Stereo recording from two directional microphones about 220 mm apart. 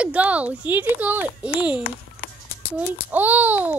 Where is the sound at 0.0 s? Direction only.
5° right (ahead or behind).